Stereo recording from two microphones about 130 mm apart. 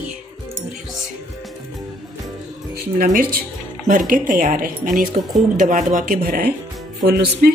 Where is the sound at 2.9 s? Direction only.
90° right.